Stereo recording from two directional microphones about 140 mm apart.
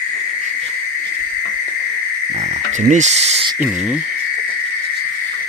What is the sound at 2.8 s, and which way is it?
Speech, 55° right (ahead or behind).